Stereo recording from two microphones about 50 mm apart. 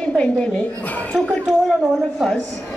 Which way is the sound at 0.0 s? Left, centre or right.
Left.